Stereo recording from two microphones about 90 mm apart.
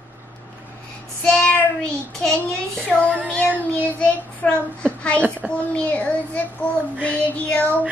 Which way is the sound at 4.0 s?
15° left (ahead or behind).